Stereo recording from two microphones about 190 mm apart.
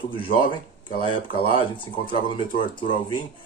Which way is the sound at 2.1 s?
45° left (ahead or behind).